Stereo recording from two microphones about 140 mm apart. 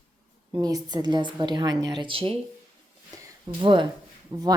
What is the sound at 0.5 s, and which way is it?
A woman's voice, 30° right (ahead or behind).